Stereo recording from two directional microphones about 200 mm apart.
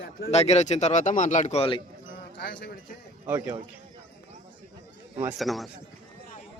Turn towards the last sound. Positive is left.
turn(degrees=0)  # may be behind; listen again after turning